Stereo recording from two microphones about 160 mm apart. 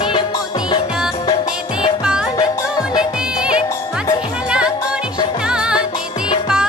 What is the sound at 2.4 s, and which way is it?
Music, 25° left (ahead or behind).